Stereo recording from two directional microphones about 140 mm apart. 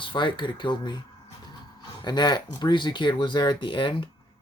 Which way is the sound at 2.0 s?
30° left (ahead or behind).